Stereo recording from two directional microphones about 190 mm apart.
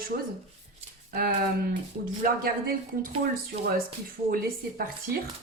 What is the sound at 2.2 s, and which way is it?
Speech, 50° right (ahead or behind).